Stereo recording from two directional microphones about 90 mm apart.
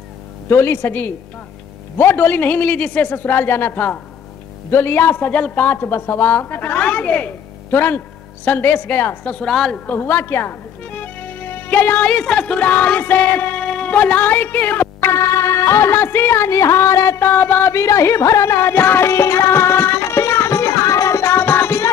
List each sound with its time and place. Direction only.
0.5 s a man's voice: 25° left (ahead or behind)
9.5 s a woman's voice: 5° left (ahead or behind)
9.8 s a man's voice: 25° left (ahead or behind)
15.0 s music: 35° left (ahead or behind)
17.3 s music: 20° left (ahead or behind)